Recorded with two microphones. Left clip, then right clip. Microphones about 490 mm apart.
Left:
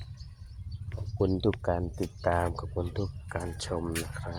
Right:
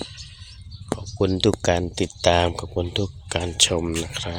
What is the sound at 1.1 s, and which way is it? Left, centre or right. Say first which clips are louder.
Speech: right 7 dB; left.